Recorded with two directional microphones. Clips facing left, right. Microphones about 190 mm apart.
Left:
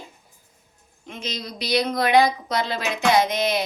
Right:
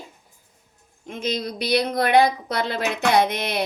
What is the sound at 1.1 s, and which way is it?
Speech, 55° right (ahead or behind).